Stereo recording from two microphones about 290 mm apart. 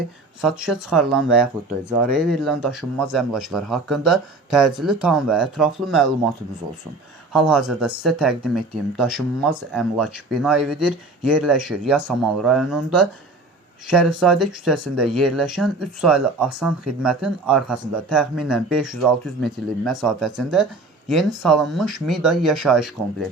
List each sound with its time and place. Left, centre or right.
0.4 s speech: centre
7.3 s speech: centre
13.8 s speech: centre